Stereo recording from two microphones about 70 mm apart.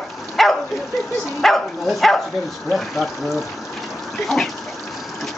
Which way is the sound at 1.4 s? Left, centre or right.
Centre.